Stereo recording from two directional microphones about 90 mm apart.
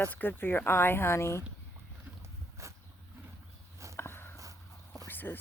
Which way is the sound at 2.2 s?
35° right (ahead or behind).